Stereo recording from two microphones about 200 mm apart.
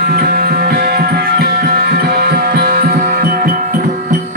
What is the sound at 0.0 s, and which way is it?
Music, 50° right (ahead or behind).